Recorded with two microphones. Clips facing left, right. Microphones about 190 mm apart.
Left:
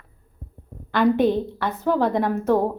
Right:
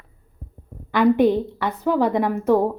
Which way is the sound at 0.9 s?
10° right (ahead or behind).